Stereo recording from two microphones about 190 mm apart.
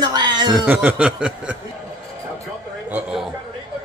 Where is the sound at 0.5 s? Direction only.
10° right (ahead or behind).